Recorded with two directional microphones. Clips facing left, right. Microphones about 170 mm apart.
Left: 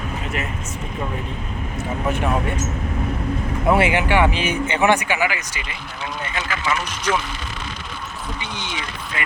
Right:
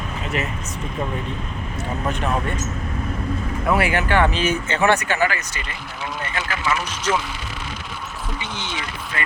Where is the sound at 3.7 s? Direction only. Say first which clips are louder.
Left 2 dB; 20° left (ahead or behind).